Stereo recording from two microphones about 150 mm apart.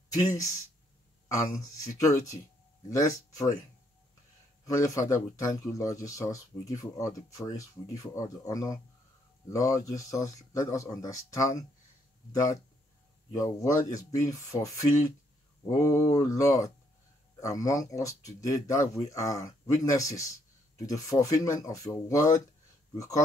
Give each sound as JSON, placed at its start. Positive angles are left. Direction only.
{"t": 0.1, "sound": "speech", "side_deg": 25}
{"t": 4.6, "sound": "speech", "side_deg": 20}
{"t": 13.3, "sound": "speech", "side_deg": 20}